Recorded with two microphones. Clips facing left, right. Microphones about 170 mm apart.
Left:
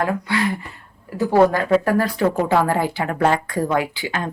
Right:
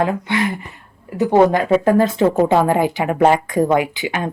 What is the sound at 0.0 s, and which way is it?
A woman's voice, 20° right (ahead or behind).